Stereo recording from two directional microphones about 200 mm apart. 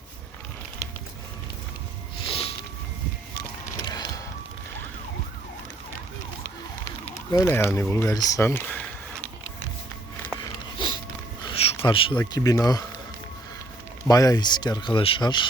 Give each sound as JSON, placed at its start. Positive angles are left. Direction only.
{"t": 2.2, "sound": "a sound", "side_deg": 30}
{"t": 3.8, "sound": "music", "side_deg": 20}
{"t": 7.0, "sound": "speech", "side_deg": 15}
{"t": 10.4, "sound": "a sound", "side_deg": 20}
{"t": 11.9, "sound": "speech", "side_deg": 25}
{"t": 14.1, "sound": "speech", "side_deg": 20}